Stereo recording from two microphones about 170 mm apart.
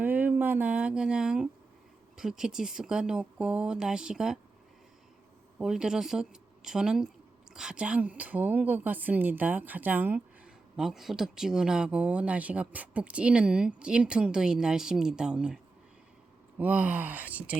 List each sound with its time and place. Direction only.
0.0 s speech: 10° right (ahead or behind)
5.5 s a woman's voice: 5° right (ahead or behind)
16.6 s a woman's voice: 10° right (ahead or behind)